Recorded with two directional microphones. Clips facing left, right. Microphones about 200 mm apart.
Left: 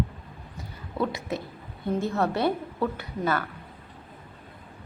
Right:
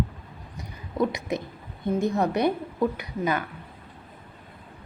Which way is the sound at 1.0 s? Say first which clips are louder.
Right 3 dB; 15° right (ahead or behind).